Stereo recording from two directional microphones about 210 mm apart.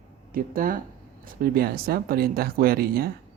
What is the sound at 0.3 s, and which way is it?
Speech, 40° right (ahead or behind).